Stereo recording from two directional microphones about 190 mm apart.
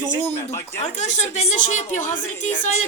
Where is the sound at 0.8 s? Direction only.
40° left (ahead or behind).